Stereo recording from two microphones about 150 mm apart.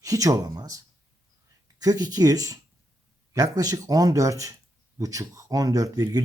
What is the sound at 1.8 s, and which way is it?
Speech, 25° right (ahead or behind).